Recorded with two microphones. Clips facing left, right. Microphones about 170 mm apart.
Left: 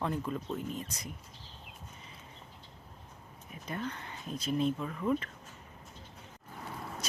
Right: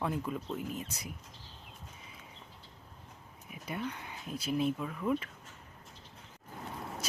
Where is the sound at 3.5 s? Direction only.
10° right (ahead or behind).